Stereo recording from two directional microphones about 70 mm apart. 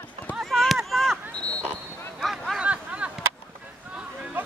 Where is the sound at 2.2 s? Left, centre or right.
Centre.